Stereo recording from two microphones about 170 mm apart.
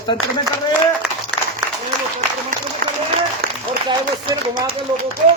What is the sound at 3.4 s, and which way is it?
Applause, 65° right (ahead or behind).